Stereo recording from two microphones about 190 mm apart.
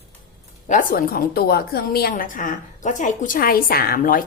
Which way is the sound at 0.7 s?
45° left (ahead or behind).